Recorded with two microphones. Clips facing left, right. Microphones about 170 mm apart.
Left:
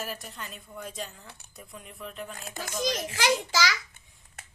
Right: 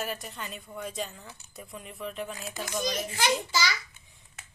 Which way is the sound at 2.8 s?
90° left.